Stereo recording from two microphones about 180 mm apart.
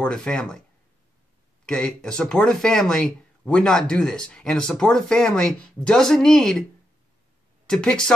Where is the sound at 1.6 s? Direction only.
5° left (ahead or behind).